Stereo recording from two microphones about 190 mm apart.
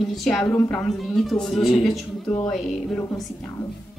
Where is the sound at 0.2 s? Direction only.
Centre (ahead or behind).